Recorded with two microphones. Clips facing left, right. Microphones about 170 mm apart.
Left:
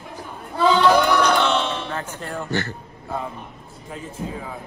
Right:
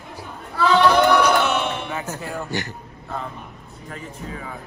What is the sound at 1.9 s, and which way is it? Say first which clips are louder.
Speech: right 1 dB; 10° right (ahead or behind).